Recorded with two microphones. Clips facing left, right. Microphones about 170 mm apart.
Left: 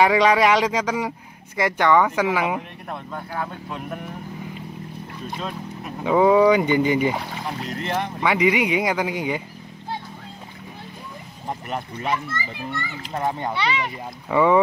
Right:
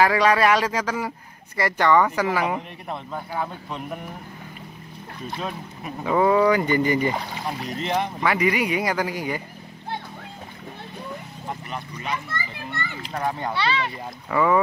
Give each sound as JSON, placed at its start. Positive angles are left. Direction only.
{"t": 0.0, "sound": "speech", "side_deg": 15}
{"t": 2.0, "sound": "speech", "side_deg": 5}
{"t": 6.0, "sound": "speech", "side_deg": 10}
{"t": 8.2, "sound": "speech", "side_deg": 15}
{"t": 13.1, "sound": "speech", "side_deg": 20}